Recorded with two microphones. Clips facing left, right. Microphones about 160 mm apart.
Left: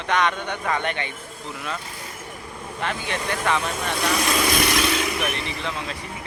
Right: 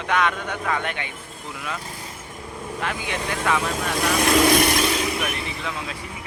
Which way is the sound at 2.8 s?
10° right (ahead or behind).